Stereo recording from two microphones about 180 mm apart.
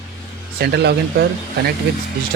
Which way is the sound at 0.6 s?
65° right (ahead or behind).